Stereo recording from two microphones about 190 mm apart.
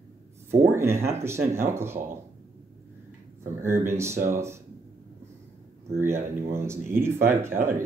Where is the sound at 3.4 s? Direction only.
15° right (ahead or behind).